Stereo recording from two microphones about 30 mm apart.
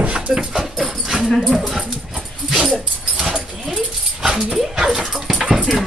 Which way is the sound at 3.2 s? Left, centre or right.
Centre.